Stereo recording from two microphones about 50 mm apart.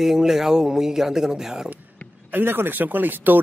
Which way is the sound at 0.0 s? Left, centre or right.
Centre.